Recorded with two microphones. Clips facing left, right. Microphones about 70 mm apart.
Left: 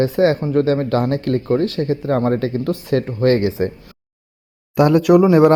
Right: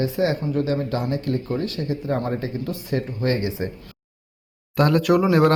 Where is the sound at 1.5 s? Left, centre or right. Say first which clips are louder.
Left 8 dB; left.